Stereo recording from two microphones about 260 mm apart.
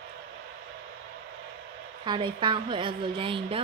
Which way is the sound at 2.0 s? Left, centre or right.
Centre.